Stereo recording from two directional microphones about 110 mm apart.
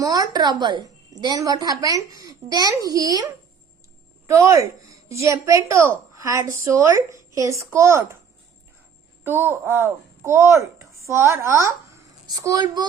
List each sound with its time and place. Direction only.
0.0 s a woman's voice: 35° right (ahead or behind)
4.3 s a woman's voice: 25° right (ahead or behind)
9.2 s a woman's voice: 20° right (ahead or behind); by 12.9 s 40° right (ahead or behind)